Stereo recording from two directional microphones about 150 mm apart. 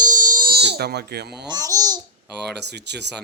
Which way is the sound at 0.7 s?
90° right.